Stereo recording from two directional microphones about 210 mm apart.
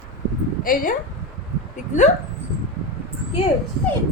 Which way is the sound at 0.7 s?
40° left (ahead or behind).